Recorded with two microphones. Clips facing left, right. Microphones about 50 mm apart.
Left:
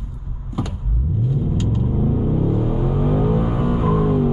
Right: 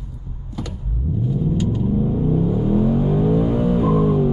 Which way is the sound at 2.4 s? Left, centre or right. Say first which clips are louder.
Right 3 dB; centre.